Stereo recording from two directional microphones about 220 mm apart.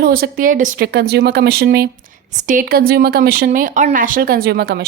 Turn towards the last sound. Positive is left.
turn(degrees=-45)  # may be behind; listen again after turning